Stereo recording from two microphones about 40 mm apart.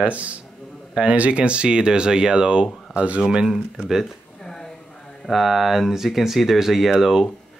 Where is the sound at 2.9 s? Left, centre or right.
Right.